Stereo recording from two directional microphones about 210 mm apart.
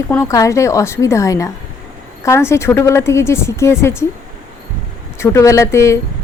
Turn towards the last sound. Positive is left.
turn(degrees=15)  # may be behind; listen again after turning